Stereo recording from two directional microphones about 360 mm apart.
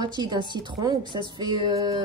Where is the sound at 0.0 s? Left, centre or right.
Centre.